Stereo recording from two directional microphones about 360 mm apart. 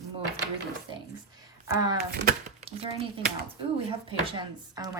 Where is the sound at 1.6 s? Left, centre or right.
Centre.